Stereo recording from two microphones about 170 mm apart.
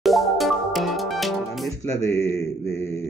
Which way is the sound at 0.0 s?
Centre (ahead or behind).